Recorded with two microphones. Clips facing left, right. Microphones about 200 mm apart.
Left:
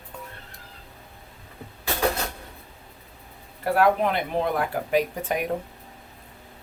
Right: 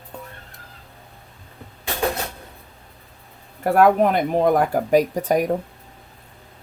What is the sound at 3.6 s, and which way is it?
Speech, 50° right (ahead or behind).